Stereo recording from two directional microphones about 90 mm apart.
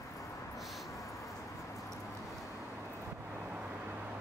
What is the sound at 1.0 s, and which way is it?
Vehicle, 35° left (ahead or behind).